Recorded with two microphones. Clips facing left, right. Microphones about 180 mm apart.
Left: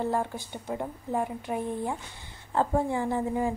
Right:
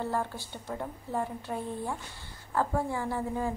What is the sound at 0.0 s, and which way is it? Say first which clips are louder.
A woman's voice: left 3 dB; 15° left (ahead or behind).